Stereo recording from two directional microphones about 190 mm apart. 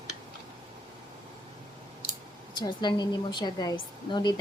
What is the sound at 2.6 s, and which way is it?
Speech, 25° left (ahead or behind).